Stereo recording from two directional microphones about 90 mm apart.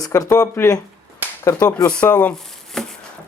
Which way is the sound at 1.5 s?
40° left (ahead or behind).